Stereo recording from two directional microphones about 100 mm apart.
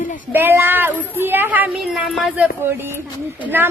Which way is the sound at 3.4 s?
20° right (ahead or behind).